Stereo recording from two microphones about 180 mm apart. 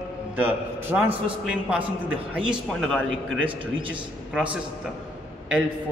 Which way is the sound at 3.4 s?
30° right (ahead or behind).